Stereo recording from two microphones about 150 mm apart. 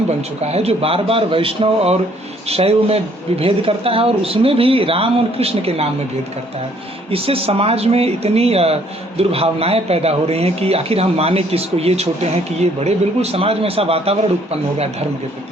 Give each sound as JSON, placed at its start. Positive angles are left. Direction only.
{"t": 0.2, "sound": "speech", "side_deg": -45}
{"t": 7.1, "sound": "speech", "side_deg": -40}